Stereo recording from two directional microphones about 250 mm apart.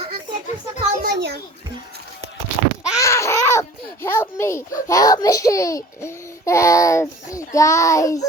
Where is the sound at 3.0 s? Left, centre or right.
Centre.